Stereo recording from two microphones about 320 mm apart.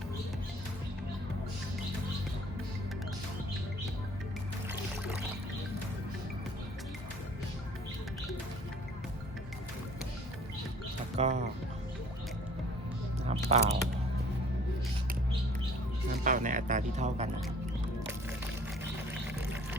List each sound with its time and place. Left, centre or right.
11.2 s speech: right
13.2 s mouse: centre
16.2 s speech: right